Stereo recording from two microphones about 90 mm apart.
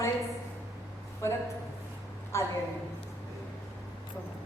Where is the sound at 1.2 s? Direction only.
30° left (ahead or behind).